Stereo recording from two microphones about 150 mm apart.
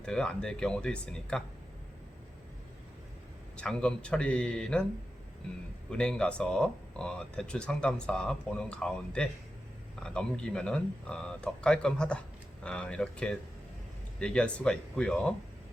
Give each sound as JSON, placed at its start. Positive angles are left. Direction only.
{"t": 0.0, "sound": "speech", "side_deg": 5}
{"t": 3.6, "sound": "speech", "side_deg": 5}
{"t": 5.9, "sound": "speech", "side_deg": 5}